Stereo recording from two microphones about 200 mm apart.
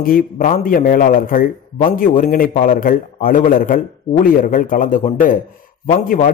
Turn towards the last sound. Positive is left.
turn(degrees=40)  # may be behind; listen again after turning